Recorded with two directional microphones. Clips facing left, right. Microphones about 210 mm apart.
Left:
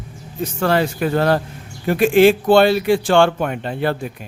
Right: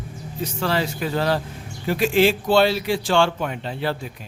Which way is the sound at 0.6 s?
55° left (ahead or behind).